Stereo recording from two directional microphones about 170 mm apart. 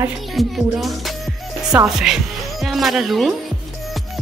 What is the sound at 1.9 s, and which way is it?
Speech, centre (ahead or behind).